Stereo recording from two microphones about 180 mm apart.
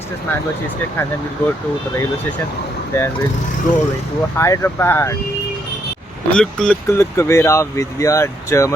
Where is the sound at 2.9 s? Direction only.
15° left (ahead or behind).